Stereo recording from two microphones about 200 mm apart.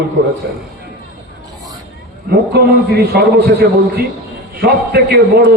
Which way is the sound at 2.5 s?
55° right (ahead or behind).